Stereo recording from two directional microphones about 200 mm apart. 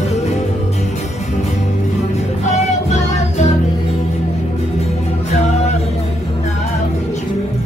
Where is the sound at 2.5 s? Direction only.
35° left (ahead or behind).